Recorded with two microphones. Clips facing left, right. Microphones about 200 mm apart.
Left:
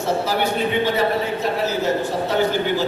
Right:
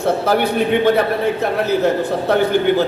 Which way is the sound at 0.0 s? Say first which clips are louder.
Right 5 dB; 55° right (ahead or behind).